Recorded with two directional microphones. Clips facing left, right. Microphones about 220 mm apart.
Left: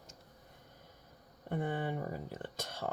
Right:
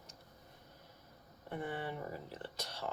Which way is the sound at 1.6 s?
50° left (ahead or behind).